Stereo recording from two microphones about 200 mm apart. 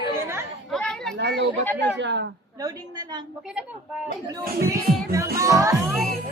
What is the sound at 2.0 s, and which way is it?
Speech, 65° right (ahead or behind).